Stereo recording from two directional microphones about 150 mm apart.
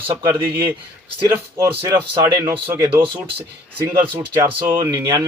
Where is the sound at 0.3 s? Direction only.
15° right (ahead or behind).